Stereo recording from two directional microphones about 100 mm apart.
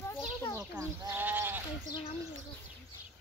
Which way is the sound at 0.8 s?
30° right (ahead or behind).